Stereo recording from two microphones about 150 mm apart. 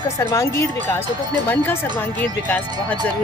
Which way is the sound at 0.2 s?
20° left (ahead or behind).